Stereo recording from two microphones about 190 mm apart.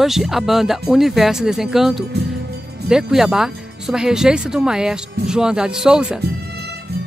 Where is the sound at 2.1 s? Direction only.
60° right (ahead or behind).